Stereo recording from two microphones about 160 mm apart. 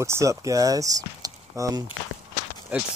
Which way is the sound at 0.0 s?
20° right (ahead or behind).